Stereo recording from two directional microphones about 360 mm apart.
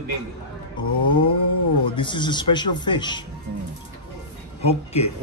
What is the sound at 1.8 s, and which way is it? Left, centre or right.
Speech, centre.